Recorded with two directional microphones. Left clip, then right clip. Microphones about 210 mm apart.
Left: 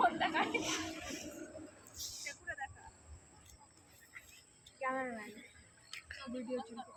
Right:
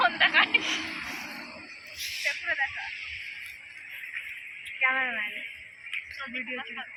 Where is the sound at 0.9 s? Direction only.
55° left (ahead or behind).